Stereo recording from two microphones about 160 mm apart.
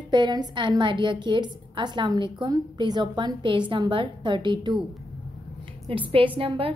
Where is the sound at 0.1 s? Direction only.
25° right (ahead or behind).